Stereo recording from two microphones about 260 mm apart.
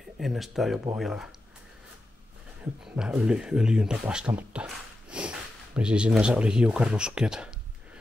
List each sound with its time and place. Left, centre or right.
0.2 s speech: centre
2.8 s speech: centre